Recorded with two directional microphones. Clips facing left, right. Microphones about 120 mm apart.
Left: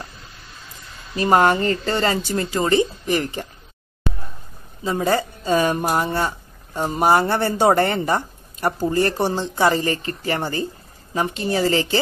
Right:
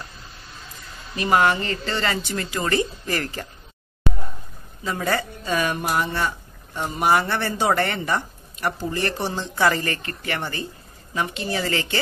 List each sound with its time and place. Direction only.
1.1 s speech: 35° left (ahead or behind); by 3.4 s 20° left (ahead or behind)
4.8 s speech: 25° left (ahead or behind)